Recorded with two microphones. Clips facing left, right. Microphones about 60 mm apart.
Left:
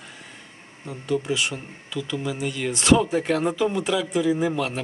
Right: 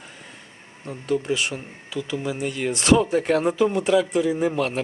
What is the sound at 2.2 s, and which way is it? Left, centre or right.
Speech, centre.